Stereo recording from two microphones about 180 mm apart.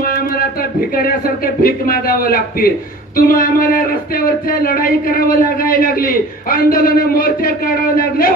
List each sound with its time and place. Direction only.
0.0 s speech: 55° left (ahead or behind)